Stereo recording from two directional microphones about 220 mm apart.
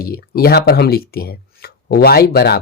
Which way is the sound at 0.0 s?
45° left (ahead or behind).